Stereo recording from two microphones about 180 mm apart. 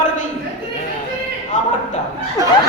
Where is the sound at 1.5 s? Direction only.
45° left (ahead or behind).